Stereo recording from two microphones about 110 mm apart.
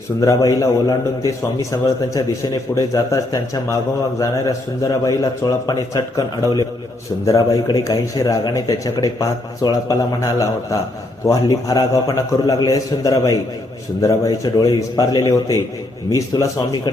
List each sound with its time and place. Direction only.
0.2 s a man's voice: 30° left (ahead or behind)